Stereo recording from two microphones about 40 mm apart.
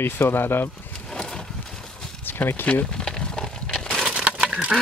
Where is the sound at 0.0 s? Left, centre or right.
Left.